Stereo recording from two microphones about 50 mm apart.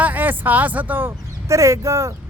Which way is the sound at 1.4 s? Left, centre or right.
Right.